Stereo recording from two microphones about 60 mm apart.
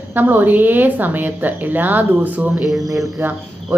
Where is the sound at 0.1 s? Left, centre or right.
Right.